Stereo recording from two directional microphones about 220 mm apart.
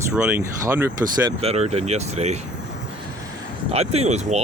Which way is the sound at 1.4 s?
30° right (ahead or behind).